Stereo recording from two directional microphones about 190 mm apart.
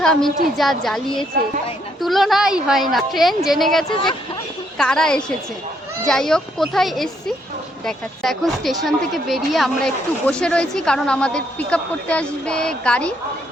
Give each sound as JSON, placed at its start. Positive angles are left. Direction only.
{"t": 0.0, "sound": "speech", "side_deg": 5}
{"t": 3.8, "sound": "speech", "side_deg": 25}
{"t": 4.8, "sound": "speech", "side_deg": 5}